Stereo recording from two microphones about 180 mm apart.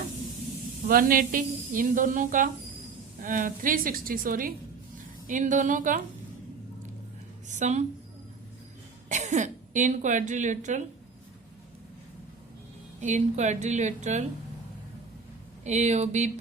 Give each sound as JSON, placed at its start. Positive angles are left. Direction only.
{"t": 0.9, "sound": "a woman's voice", "side_deg": -50}
{"t": 7.4, "sound": "a woman's voice", "side_deg": -40}
{"t": 9.0, "sound": "a woman's voice", "side_deg": -40}
{"t": 13.0, "sound": "a woman's voice", "side_deg": -40}
{"t": 15.6, "sound": "a woman's voice", "side_deg": -40}